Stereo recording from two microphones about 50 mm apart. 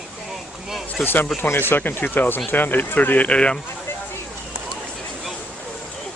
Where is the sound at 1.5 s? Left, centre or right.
Left.